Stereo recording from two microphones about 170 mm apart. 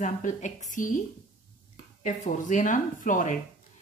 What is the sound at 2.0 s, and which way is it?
A woman's voice, 50° left (ahead or behind).